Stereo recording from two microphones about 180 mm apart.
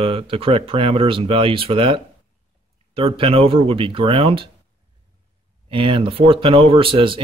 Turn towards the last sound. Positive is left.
turn(degrees=-30)  # may be behind; listen again after turning